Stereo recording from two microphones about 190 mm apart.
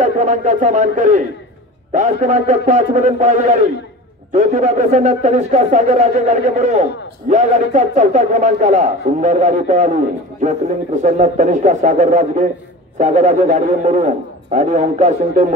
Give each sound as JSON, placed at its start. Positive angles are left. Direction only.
{"t": 0.0, "sound": "a man's voice", "side_deg": -40}
{"t": 11.0, "sound": "a man's voice", "side_deg": -40}